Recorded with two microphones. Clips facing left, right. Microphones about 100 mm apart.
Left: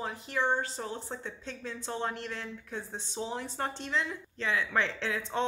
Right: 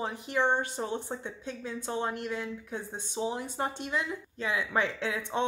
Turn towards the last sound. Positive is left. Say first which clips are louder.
# right 1 dB
turn(degrees=-15)  # may be behind; listen again after turning